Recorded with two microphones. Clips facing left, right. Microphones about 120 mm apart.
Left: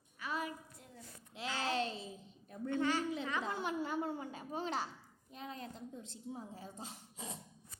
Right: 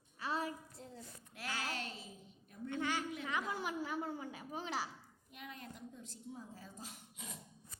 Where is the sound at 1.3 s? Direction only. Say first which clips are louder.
Left 5 dB; 20° left (ahead or behind).